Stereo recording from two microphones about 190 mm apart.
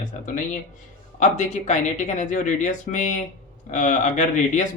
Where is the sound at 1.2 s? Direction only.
40° left (ahead or behind).